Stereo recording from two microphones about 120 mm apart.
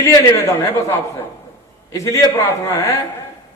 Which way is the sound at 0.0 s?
25° left (ahead or behind).